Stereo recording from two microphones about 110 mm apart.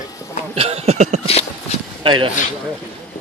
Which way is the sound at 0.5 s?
70° right (ahead or behind).